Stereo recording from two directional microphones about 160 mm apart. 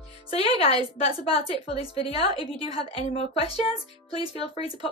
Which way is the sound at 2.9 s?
35° left (ahead or behind).